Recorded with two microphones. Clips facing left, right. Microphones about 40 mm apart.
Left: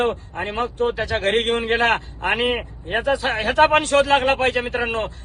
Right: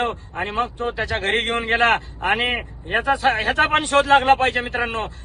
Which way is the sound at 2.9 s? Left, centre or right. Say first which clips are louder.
Right 2 dB; right.